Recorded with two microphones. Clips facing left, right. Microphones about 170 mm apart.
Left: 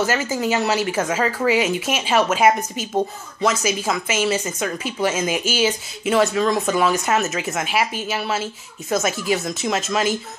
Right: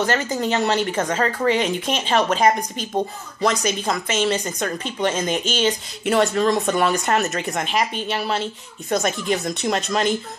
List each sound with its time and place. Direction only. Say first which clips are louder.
0.0 s speech: even; 5° left (ahead or behind)